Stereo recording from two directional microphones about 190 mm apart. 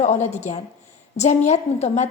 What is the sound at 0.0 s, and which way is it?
A woman's voice, 40° left (ahead or behind).